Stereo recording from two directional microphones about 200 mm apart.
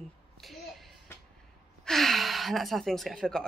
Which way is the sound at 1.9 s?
Centre (ahead or behind).